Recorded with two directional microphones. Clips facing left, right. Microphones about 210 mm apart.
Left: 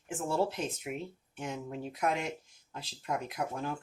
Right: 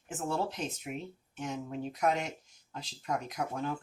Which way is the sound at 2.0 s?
40° right (ahead or behind).